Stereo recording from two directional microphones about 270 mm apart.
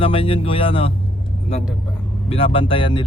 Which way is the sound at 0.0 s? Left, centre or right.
Centre.